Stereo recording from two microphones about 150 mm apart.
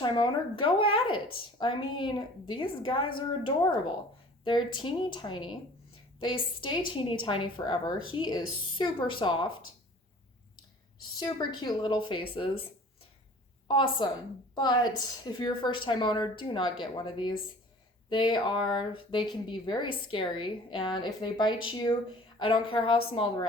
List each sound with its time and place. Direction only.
0.0 s speech: 30° left (ahead or behind)
11.0 s speech: 30° left (ahead or behind)
13.7 s speech: 30° left (ahead or behind)